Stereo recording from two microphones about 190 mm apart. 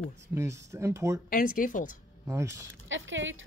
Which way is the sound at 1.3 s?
45° left (ahead or behind).